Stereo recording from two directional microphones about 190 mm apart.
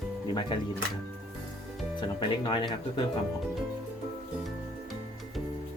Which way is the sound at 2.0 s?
25° left (ahead or behind).